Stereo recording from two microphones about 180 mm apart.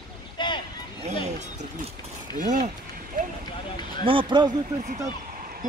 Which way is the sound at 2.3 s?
45° right (ahead or behind).